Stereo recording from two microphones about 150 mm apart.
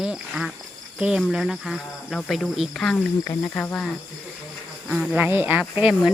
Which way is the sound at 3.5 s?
10° left (ahead or behind).